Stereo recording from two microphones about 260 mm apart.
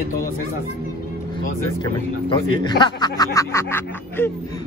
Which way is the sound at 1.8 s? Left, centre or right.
Centre.